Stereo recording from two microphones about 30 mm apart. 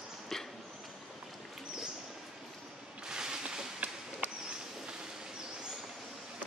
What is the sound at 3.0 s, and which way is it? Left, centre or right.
Boat, right.